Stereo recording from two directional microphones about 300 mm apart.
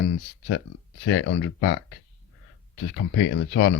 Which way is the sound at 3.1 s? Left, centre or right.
Left.